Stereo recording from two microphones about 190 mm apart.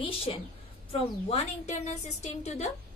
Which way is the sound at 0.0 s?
30° left (ahead or behind).